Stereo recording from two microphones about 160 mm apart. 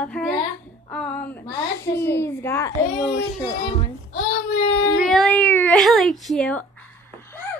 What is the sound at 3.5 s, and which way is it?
Speech, 35° left (ahead or behind).